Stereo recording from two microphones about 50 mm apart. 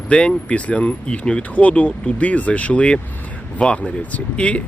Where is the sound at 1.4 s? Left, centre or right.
Left.